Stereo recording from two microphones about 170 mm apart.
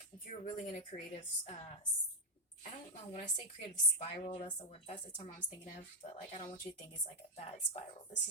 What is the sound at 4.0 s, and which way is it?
A woman's voice, 40° left (ahead or behind).